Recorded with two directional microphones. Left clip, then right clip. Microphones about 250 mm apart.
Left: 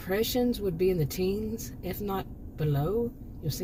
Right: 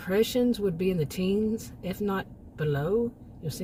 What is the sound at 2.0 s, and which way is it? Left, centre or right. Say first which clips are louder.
Speech: right 4 dB; right.